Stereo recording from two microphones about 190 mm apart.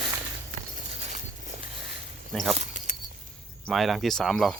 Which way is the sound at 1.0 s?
35° right (ahead or behind).